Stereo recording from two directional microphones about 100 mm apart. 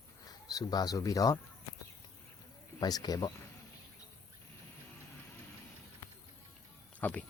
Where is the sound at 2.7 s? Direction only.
40° left (ahead or behind).